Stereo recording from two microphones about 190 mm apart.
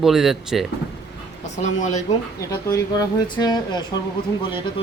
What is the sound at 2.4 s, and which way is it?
Speech, 20° left (ahead or behind).